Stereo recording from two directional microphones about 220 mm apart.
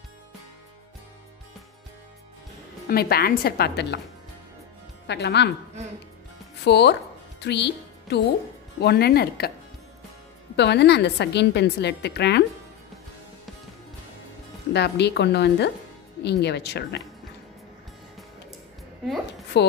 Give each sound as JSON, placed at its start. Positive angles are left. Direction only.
{"t": 2.9, "sound": "a woman's voice", "side_deg": 45}
{"t": 5.0, "sound": "a woman's voice", "side_deg": 50}
{"t": 6.6, "sound": "music", "side_deg": 50}
{"t": 8.8, "sound": "a woman's voice", "side_deg": 45}
{"t": 10.5, "sound": "a woman's voice", "side_deg": 50}
{"t": 14.7, "sound": "a woman's voice", "side_deg": 50}
{"t": 19.6, "sound": "a woman's voice", "side_deg": 50}